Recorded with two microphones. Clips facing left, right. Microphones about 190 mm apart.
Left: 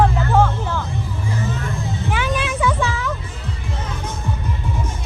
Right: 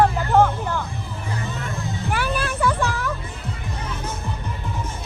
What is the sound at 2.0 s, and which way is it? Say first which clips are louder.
Vehicle: left 2 dB; centre (ahead or behind).